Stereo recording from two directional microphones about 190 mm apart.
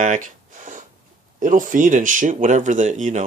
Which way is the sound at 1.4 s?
45° right (ahead or behind).